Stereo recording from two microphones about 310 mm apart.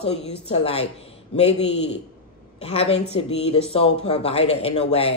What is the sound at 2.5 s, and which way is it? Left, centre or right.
A man's voice, centre.